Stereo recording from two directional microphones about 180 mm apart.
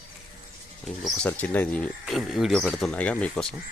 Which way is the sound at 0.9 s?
5° left (ahead or behind).